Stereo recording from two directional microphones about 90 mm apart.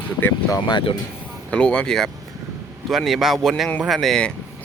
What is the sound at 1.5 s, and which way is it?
Speech, 10° left (ahead or behind).